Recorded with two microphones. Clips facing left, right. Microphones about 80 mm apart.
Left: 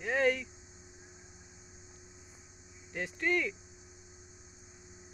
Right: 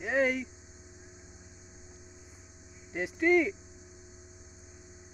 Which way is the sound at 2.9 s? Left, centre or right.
Centre.